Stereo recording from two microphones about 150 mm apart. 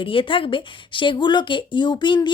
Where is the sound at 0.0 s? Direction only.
35° left (ahead or behind).